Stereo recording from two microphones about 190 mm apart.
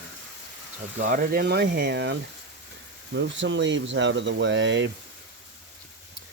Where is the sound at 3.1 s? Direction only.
70° right (ahead or behind).